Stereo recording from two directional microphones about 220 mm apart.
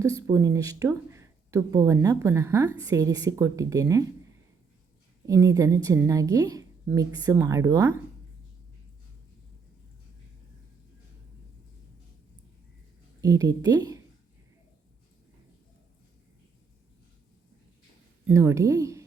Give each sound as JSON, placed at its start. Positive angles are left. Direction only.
{"t": 0.0, "sound": "speech", "side_deg": -15}
{"t": 5.2, "sound": "speech", "side_deg": -15}
{"t": 13.2, "sound": "speech", "side_deg": -15}
{"t": 18.3, "sound": "speech", "side_deg": -10}